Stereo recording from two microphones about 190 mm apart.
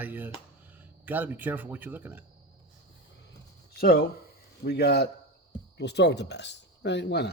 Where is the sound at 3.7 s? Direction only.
55° left (ahead or behind).